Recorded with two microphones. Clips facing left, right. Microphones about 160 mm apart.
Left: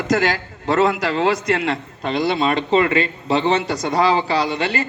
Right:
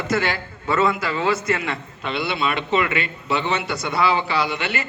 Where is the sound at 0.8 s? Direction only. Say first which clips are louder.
Left 4 dB; 75° left (ahead or behind).